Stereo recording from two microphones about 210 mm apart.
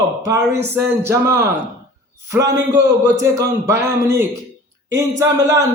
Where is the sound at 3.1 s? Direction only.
15° right (ahead or behind).